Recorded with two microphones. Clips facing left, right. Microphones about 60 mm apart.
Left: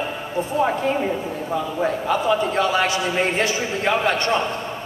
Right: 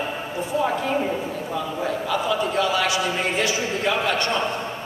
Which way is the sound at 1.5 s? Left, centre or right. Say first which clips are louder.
Left 4 dB; left.